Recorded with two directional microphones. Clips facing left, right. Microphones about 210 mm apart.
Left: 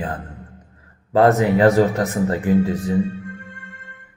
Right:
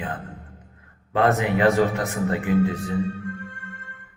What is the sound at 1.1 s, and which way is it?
Speech, 40° left (ahead or behind).